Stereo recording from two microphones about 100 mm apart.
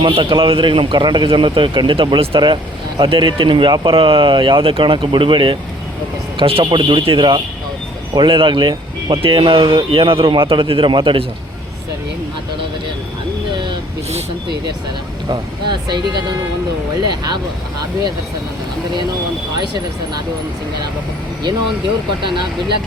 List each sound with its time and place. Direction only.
0.0 s speech: 60° right (ahead or behind)
15.3 s speech: 50° right (ahead or behind)
22.2 s speech: 55° right (ahead or behind)